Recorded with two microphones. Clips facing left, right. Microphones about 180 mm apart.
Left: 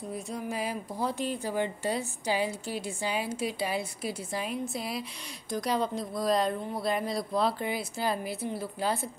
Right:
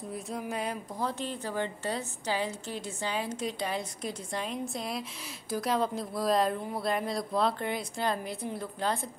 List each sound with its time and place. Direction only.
0.1 s a woman's voice: centre (ahead or behind)